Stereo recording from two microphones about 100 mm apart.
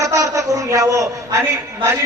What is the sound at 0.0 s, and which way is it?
A man's voice, 35° right (ahead or behind).